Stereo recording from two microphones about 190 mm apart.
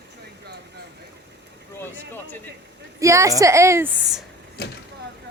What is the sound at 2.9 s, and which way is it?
A woman's voice, 15° right (ahead or behind).